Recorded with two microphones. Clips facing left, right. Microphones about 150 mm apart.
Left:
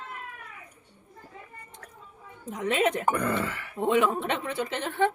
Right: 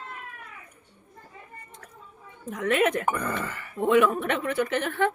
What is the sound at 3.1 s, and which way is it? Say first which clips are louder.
Speech: left 2 dB; 60° left (ahead or behind).